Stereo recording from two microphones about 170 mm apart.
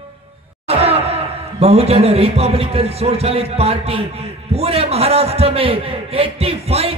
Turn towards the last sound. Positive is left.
turn(degrees=-35)  # may be behind; listen again after turning